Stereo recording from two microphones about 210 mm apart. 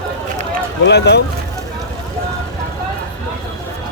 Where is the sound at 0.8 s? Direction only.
50° left (ahead or behind).